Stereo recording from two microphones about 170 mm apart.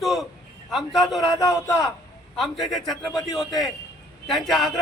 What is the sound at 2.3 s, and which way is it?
A man's voice, centre (ahead or behind).